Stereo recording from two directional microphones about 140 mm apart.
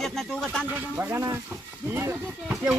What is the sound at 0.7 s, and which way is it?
Speech, 15° right (ahead or behind).